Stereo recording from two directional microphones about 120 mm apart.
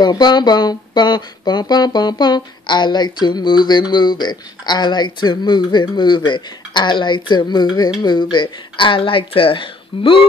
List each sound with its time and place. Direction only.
0.0 s speech: 35° left (ahead or behind)